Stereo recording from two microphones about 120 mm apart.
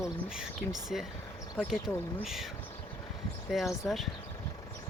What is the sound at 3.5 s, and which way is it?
Speech, centre (ahead or behind).